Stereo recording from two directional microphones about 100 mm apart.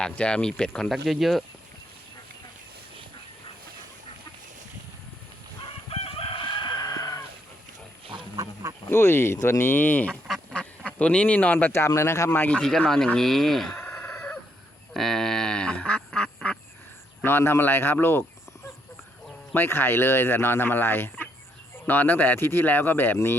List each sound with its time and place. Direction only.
0.0 s speech: 10° left (ahead or behind)
5.9 s chicken: 70° left (ahead or behind); by 7.2 s 40° left (ahead or behind)
8.1 s wild animals: 55° right (ahead or behind)
8.9 s speech: 25° left (ahead or behind)
10.2 s duck: 5° left (ahead or behind); by 11.9 s 20° left (ahead or behind)
11.9 s speech: 30° left (ahead or behind)
12.5 s speech: 5° left (ahead or behind)
13.9 s chicken: 15° left (ahead or behind)
14.9 s duck: 5° left (ahead or behind)
17.2 s speech: 25° left (ahead or behind)
19.5 s speech: 20° left (ahead or behind)